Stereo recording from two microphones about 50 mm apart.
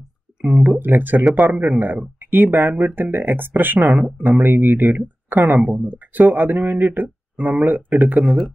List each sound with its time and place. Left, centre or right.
0.4 s speech: right
8.2 s speech: centre